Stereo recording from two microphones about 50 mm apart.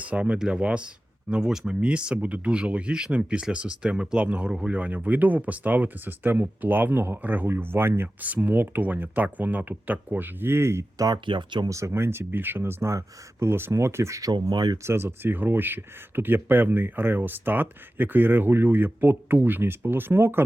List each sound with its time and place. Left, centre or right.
0.0 s speech: right
8.2 s speech: right
12.9 s speech: right
13.5 s speech: right